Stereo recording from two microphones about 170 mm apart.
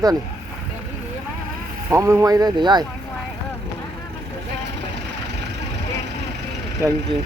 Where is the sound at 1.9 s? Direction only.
15° right (ahead or behind).